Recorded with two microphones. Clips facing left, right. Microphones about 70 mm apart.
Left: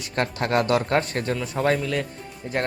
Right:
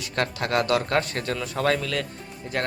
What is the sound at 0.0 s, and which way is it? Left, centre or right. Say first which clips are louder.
Speech: left 1 dB; left.